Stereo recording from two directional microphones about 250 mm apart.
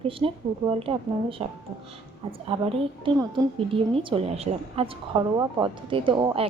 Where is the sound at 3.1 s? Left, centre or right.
Right.